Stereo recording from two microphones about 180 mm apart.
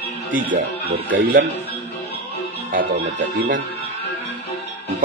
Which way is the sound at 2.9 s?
75° right (ahead or behind).